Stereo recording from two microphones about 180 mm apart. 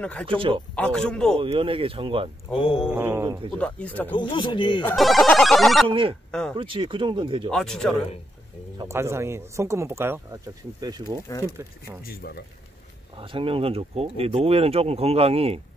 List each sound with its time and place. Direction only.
0.0 s speech: 5° left (ahead or behind)
0.7 s music: 5° left (ahead or behind)
1.4 s speech: 30° right (ahead or behind)
2.5 s mantra: 30° left (ahead or behind)
2.9 s speech: 10° right (ahead or behind)
3.5 s speech: 5° left (ahead or behind)
4.2 s speech: 25° left (ahead or behind)
4.9 s music: centre (ahead or behind)
5.9 s speech: 30° right (ahead or behind)
7.5 s music: 5° left (ahead or behind)
8.7 s speech: 15° right (ahead or behind)
12.0 s speech: 55° left (ahead or behind)
13.2 s speech: 30° right (ahead or behind)